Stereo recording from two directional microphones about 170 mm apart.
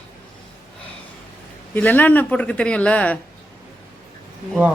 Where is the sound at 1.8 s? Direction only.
10° left (ahead or behind).